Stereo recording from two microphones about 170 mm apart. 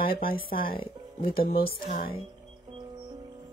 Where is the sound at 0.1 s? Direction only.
60° left (ahead or behind).